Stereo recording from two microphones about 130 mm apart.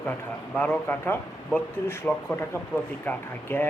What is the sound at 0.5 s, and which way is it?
Speech, 15° left (ahead or behind).